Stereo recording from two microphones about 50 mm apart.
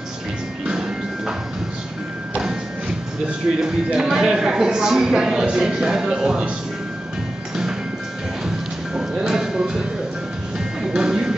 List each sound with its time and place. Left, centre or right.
0.7 s music: centre
3.6 s speech: centre
8.9 s music: centre